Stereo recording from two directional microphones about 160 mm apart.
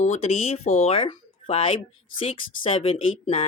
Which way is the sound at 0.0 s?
40° left (ahead or behind).